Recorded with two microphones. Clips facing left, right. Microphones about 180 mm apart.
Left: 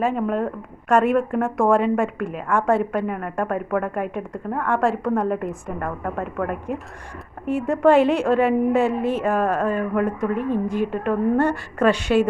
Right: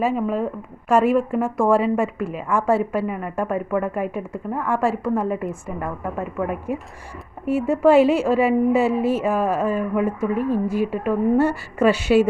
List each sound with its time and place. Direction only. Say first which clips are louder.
0.0 s a woman's voice: even; 5° right (ahead or behind)